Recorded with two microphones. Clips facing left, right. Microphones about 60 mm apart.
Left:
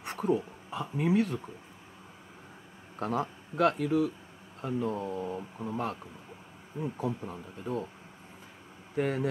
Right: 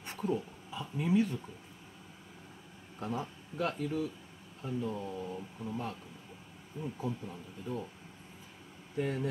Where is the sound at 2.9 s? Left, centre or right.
Left.